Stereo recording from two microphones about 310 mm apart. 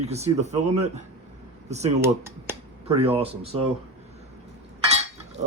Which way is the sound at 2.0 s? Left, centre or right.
Centre.